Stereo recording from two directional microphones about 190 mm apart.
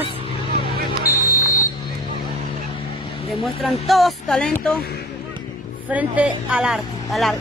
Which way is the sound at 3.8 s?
Centre (ahead or behind).